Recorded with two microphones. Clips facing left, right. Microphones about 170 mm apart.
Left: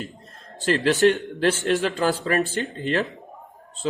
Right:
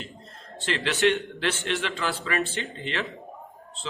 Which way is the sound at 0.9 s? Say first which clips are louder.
Left 4 dB; 40° left (ahead or behind).